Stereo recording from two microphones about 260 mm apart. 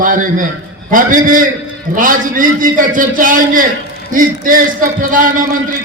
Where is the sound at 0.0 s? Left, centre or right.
Right.